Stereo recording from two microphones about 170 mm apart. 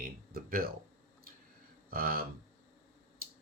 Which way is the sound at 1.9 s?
60° right (ahead or behind).